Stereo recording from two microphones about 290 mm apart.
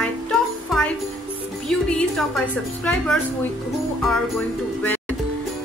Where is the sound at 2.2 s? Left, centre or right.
Centre.